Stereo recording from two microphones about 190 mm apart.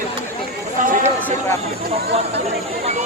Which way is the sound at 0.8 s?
45° right (ahead or behind).